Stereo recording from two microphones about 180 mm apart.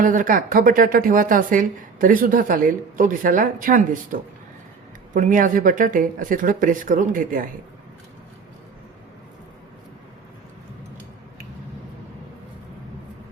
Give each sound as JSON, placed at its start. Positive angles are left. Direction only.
{"t": 0.0, "sound": "a woman's voice", "side_deg": -50}